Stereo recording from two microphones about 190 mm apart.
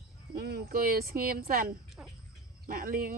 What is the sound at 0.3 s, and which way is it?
Speech, 55° right (ahead or behind).